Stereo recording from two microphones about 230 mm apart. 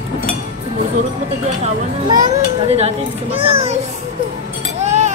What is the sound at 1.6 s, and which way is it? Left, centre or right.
Speech, centre.